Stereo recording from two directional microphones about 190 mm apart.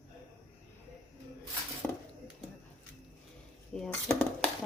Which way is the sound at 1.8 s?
10° left (ahead or behind).